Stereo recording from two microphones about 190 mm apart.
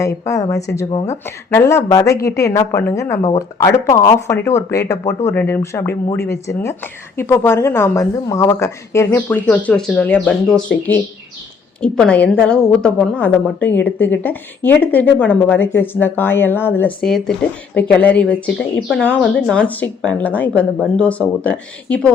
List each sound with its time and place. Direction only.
0.0 s a woman's voice: 15° left (ahead or behind)
0.9 s speech: 30° left (ahead or behind)
1.5 s a woman's voice: 15° left (ahead or behind)